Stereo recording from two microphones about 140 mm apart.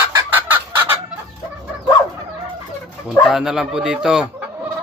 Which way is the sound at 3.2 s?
Centre (ahead or behind).